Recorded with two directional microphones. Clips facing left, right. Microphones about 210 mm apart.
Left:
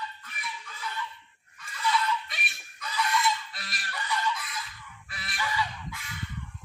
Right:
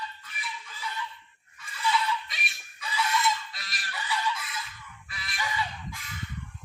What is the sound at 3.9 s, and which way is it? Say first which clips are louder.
Chicken: even; 5° right (ahead or behind).